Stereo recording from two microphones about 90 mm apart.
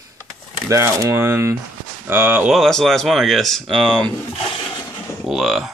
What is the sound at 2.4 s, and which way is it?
Speech, centre (ahead or behind).